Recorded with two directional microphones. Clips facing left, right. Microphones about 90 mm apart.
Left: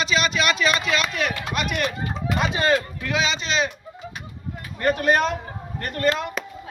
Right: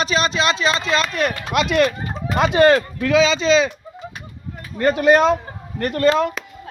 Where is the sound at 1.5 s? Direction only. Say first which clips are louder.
Right 10 dB; 90° right.